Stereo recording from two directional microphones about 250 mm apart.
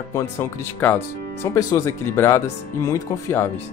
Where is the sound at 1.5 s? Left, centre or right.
Centre.